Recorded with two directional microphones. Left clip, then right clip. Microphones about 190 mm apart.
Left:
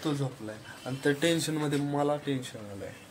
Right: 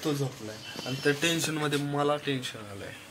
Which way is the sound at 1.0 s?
35° left (ahead or behind).